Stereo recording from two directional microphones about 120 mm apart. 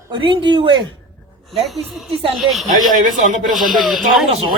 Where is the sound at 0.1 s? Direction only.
40° right (ahead or behind).